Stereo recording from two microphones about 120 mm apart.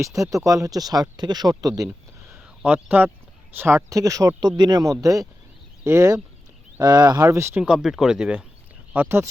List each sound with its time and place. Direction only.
0.0 s speech: 25° right (ahead or behind)
2.6 s speech: 15° right (ahead or behind)
7.6 s speech: 5° right (ahead or behind)